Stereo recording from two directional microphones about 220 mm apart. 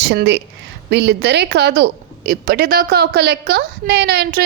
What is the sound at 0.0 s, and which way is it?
A woman's voice, 50° right (ahead or behind).